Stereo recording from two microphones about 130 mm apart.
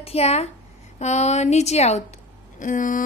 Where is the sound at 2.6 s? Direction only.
80° left.